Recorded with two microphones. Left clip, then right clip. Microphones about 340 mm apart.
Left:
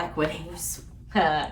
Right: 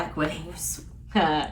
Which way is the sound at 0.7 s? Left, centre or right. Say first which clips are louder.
Left 1 dB; centre.